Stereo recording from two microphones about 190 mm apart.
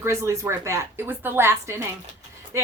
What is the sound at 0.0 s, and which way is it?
Speech, 15° right (ahead or behind).